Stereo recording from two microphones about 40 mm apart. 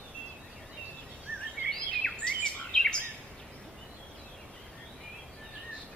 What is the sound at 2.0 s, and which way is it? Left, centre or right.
Bird vocalization, centre.